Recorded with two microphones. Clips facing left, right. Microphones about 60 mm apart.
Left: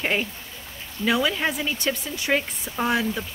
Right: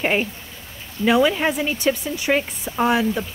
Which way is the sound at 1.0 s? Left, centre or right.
Right.